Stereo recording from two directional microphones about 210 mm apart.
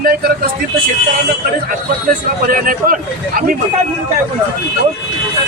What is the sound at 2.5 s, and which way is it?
Speech, 40° right (ahead or behind).